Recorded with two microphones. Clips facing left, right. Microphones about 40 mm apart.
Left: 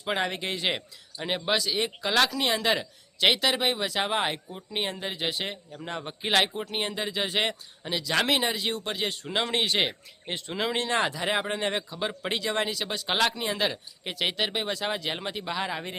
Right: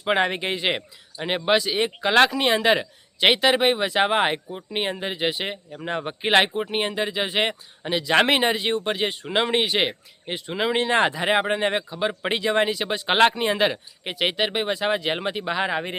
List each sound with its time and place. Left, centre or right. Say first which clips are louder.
0.0 s speech: right 7 dB; right
8.1 s speech: right 6 dB; right